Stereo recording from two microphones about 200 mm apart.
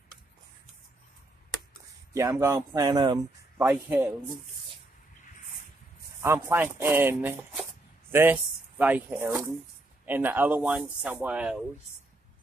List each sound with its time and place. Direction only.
2.1 s speech: 15° right (ahead or behind)
6.2 s speech: 10° right (ahead or behind)